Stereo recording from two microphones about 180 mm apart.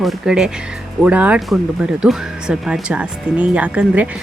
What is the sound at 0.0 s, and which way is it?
Speech, 5° right (ahead or behind).